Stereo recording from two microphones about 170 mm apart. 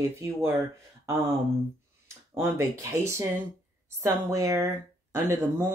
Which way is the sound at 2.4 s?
15° right (ahead or behind).